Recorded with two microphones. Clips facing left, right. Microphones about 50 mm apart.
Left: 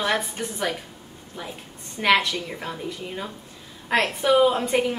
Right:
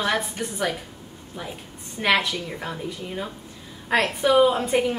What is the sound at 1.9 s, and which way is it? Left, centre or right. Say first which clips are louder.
Speech: left 1 dB; centre.